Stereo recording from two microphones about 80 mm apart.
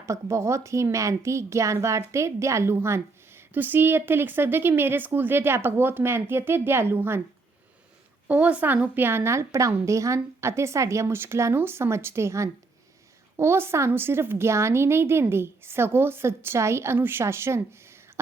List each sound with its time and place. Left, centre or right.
0.0 s a woman's voice: right
8.3 s a woman's voice: centre